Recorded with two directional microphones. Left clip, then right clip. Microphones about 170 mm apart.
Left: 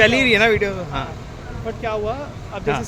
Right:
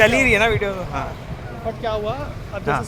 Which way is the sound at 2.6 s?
35° left (ahead or behind).